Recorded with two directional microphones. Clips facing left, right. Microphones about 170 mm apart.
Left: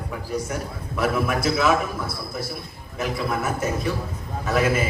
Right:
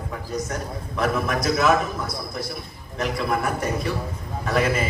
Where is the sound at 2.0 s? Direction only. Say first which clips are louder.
Even; 25° left (ahead or behind).